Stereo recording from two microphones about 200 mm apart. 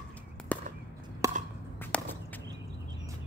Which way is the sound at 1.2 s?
15° right (ahead or behind).